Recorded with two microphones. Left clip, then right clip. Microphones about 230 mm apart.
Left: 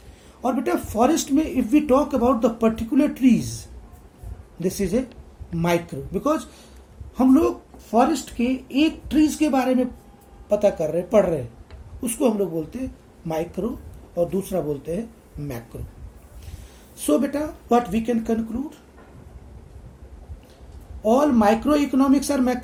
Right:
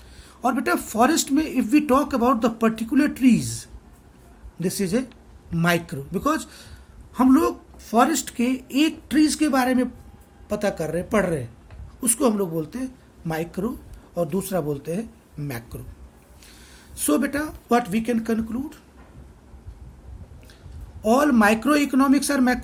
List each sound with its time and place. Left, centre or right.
0.4 s speech: right
17.0 s speech: right
21.0 s speech: right